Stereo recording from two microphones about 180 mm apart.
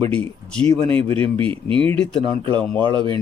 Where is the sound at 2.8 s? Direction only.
25° right (ahead or behind).